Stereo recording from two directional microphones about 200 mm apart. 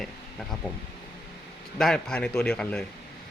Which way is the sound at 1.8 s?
5° left (ahead or behind).